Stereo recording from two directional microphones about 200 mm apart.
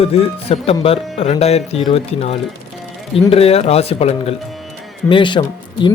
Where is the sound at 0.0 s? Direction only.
30° left (ahead or behind).